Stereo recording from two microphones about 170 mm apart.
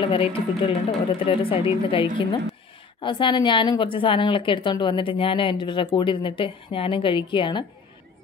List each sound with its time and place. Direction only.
0.0 s a woman's voice: 30° left (ahead or behind)